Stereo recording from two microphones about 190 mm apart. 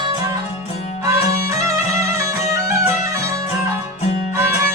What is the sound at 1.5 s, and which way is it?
Music, 15° right (ahead or behind).